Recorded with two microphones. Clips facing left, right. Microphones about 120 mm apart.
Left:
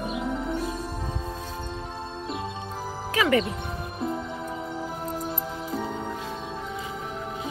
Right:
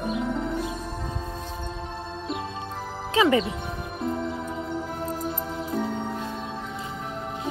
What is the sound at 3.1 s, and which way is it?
Music, 25° right (ahead or behind).